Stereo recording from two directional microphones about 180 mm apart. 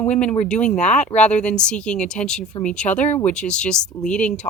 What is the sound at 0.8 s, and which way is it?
Speech, 40° left (ahead or behind).